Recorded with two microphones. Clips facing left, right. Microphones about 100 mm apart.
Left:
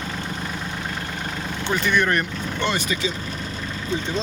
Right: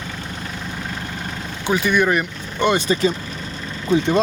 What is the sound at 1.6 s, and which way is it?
Speech, 10° right (ahead or behind).